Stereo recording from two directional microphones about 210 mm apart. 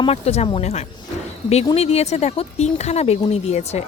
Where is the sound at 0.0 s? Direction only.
30° left (ahead or behind).